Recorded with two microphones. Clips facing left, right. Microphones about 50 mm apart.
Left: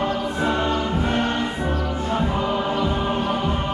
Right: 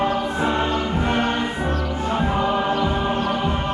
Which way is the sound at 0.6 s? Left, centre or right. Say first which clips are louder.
Even; centre.